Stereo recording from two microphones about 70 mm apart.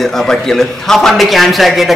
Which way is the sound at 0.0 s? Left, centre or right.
Centre.